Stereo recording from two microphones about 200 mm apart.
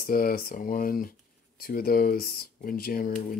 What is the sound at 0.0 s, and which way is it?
Speech, 45° left (ahead or behind).